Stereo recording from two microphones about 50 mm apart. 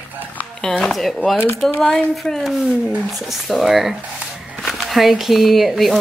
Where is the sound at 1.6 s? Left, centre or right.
Centre.